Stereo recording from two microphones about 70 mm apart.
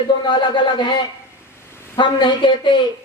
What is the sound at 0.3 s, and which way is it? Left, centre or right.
Speech, left.